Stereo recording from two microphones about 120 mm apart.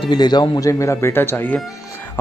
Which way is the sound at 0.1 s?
35° left (ahead or behind).